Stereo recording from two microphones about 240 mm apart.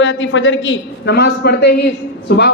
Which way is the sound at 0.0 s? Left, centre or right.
Left.